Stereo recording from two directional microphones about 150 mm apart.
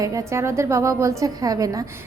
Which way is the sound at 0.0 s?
20° right (ahead or behind).